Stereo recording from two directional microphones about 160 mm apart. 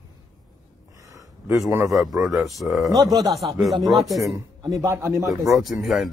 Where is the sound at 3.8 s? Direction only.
Centre (ahead or behind).